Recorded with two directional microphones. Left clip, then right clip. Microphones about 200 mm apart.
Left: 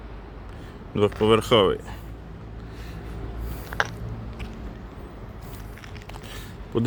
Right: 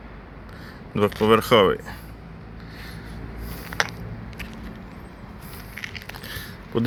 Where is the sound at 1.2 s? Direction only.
5° left (ahead or behind).